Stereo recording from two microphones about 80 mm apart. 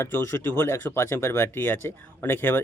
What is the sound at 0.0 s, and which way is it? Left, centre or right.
Speech, left.